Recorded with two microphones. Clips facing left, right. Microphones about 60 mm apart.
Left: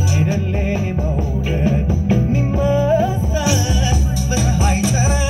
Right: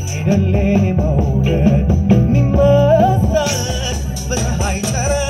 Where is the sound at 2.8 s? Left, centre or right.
Right.